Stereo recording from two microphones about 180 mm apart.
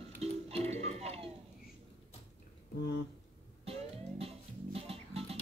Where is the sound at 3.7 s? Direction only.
35° right (ahead or behind).